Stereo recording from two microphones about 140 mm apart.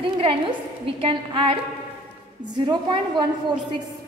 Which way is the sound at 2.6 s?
35° right (ahead or behind).